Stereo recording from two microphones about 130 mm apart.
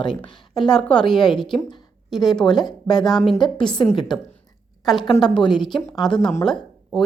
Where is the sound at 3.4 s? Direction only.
35° left (ahead or behind).